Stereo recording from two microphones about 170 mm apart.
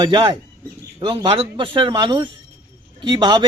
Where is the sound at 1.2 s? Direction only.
30° right (ahead or behind).